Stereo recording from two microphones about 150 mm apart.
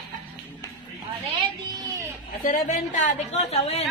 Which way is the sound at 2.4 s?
65° left (ahead or behind).